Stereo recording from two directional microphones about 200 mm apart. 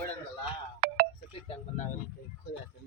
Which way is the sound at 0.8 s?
50° right (ahead or behind).